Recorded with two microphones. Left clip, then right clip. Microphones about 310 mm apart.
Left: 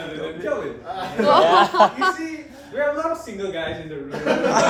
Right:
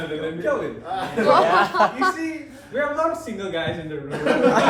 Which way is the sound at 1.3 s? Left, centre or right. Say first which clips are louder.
Left 2 dB; left.